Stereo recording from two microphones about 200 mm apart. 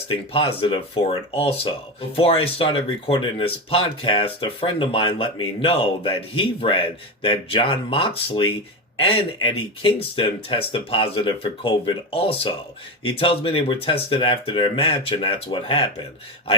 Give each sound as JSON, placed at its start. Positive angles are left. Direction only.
{"t": 0.1, "sound": "speech", "side_deg": 30}